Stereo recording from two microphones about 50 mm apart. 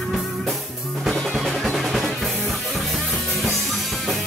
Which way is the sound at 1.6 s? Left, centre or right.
Centre.